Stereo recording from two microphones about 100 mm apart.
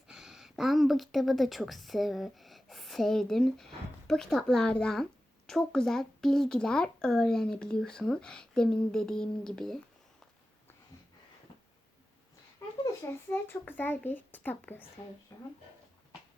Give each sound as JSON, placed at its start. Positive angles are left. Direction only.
{"t": 0.1, "sound": "a woman's voice", "side_deg": -5}
{"t": 12.8, "sound": "a child's voice", "side_deg": 25}
{"t": 15.3, "sound": "speech", "side_deg": 40}